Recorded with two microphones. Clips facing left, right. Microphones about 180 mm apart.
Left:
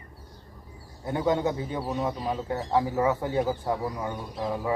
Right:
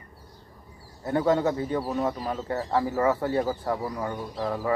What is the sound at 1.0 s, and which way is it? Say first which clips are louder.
Speech: right 2 dB; 15° left (ahead or behind).